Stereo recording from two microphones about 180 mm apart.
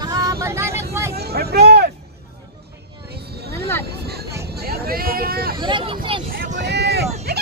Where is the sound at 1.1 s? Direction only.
60° right (ahead or behind).